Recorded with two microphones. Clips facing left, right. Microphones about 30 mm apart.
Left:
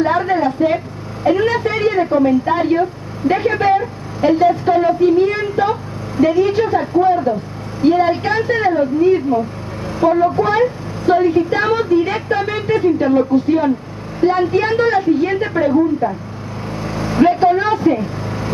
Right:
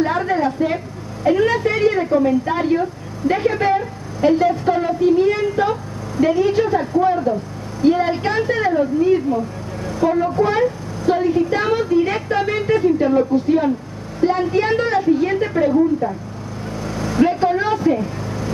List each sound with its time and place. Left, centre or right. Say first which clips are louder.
0.0 s a sound: left 3 dB; centre
1.2 s a woman's voice: left 1 dB; centre
16.8 s vehicle: left 3 dB; left
17.3 s speech: left 4 dB; left